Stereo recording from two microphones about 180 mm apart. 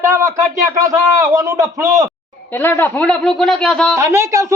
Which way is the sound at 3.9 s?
15° right (ahead or behind).